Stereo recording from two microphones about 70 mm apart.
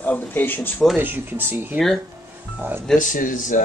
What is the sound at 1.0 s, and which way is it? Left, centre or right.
Speech, right.